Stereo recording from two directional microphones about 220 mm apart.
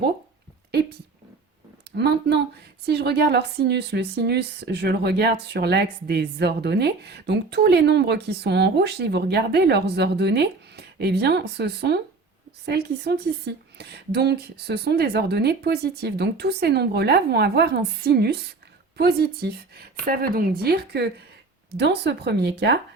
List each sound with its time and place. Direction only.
0.7 s speech: 45° right (ahead or behind)
1.9 s a sound: 50° right (ahead or behind)
2.8 s a woman's voice: 50° right (ahead or behind)